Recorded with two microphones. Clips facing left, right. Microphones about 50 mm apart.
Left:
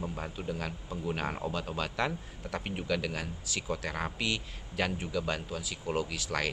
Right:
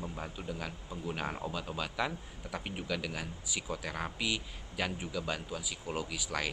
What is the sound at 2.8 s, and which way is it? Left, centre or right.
Speech, centre.